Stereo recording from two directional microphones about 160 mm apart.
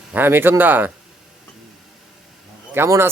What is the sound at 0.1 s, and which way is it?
Speech, 10° right (ahead or behind).